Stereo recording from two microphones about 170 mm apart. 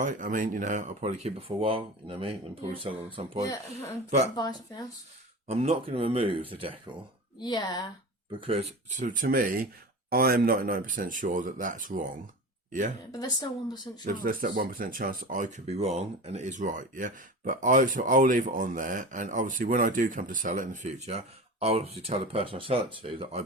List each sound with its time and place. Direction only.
0.0 s speech: 50° right (ahead or behind)
4.4 s speech: 25° left (ahead or behind)
5.5 s speech: 35° right (ahead or behind)
7.3 s speech: 25° left (ahead or behind)
8.3 s speech: 30° right (ahead or behind)
9.0 s speech: 55° right (ahead or behind)
13.1 s speech: 25° left (ahead or behind)
14.0 s speech: 50° right (ahead or behind); by 23.4 s 30° right (ahead or behind)